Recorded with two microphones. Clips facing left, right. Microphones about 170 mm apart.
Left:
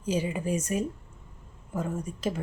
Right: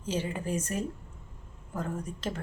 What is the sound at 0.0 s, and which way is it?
Speech, 10° left (ahead or behind).